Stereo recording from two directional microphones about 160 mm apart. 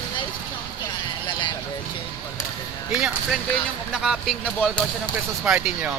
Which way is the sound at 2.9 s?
5° right (ahead or behind).